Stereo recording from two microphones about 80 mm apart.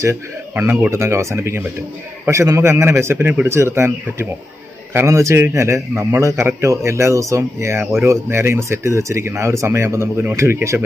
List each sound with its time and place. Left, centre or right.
0.9 s a man's voice: right